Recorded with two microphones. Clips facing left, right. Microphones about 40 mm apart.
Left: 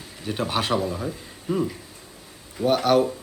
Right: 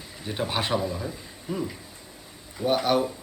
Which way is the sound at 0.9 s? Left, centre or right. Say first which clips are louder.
Left 3 dB; centre.